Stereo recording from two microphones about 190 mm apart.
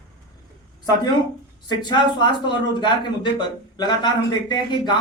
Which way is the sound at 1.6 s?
25° left (ahead or behind).